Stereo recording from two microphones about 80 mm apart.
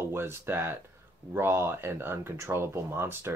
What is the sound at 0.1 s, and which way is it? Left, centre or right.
Speech, right.